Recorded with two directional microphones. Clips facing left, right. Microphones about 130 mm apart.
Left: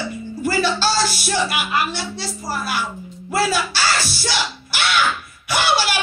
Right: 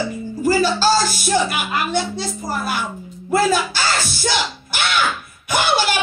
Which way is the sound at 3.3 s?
50° right (ahead or behind).